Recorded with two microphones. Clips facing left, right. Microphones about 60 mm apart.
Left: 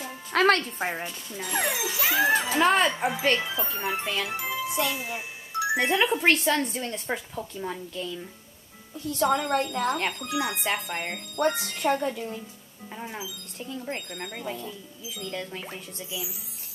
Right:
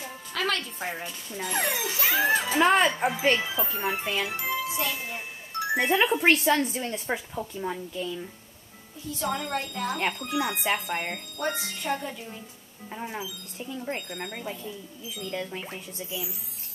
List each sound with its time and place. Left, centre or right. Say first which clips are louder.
0.3 s speech: left 8 dB; left
1.3 s speech: even; centre
9.1 s speech: left 6 dB; left
9.9 s speech: even; centre
11.5 s speech: left 6 dB; left
12.0 s speech: left 7 dB; left
12.9 s speech: right 2 dB; centre